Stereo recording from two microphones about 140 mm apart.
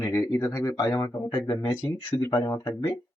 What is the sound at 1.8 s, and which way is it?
A man's voice, 15° left (ahead or behind).